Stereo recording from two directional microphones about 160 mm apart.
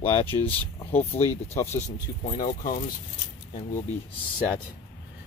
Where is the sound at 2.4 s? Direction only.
55° left (ahead or behind).